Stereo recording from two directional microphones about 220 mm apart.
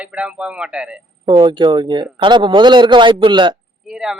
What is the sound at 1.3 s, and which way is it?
A man's voice, 20° right (ahead or behind).